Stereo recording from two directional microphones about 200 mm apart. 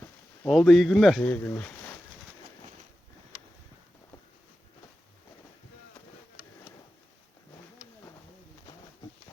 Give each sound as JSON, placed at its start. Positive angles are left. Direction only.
{"t": 0.4, "sound": "speech", "side_deg": 0}